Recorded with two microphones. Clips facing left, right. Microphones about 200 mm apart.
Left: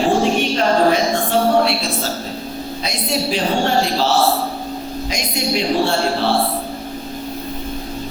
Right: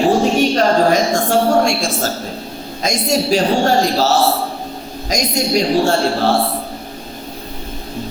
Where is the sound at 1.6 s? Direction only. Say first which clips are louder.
Right 2 dB; 45° right (ahead or behind).